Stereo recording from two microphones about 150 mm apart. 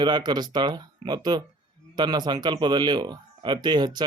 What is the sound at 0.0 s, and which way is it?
A man's voice, 30° right (ahead or behind).